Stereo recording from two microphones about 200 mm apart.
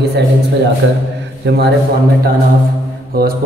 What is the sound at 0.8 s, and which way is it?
Speech, 70° right (ahead or behind).